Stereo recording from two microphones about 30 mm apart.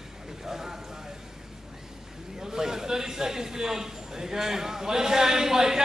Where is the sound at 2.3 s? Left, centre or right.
Centre.